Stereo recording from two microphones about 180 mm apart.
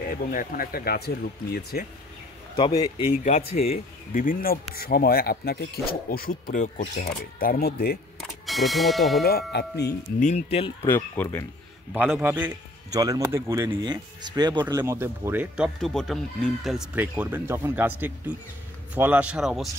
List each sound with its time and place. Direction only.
0.1 s speech: 50° left (ahead or behind)
2.5 s a man's voice: 25° left (ahead or behind)
3.3 s speech: 40° left (ahead or behind)
4.1 s speech: 50° left (ahead or behind)
8.5 s a man's voice: centre (ahead or behind)
9.2 s speech: 65° left (ahead or behind)
10.2 s speech: 35° left (ahead or behind)
10.8 s speech: 15° left (ahead or behind)
12.2 s a man's voice: 10° right (ahead or behind)